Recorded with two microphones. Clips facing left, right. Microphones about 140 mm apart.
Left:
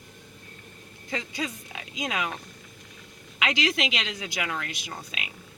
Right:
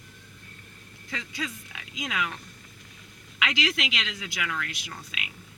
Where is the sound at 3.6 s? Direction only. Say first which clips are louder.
Left 3 dB; 45° left (ahead or behind).